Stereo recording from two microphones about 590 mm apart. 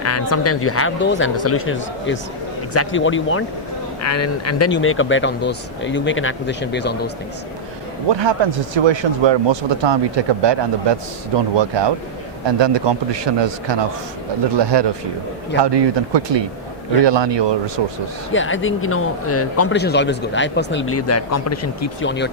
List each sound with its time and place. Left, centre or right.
0.0 s speech: left
8.1 s speech: right
18.3 s speech: centre